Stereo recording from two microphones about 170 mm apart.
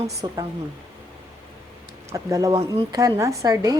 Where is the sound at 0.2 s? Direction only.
25° right (ahead or behind).